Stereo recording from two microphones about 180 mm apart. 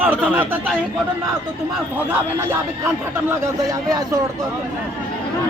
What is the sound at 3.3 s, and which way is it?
Speech, 20° right (ahead or behind).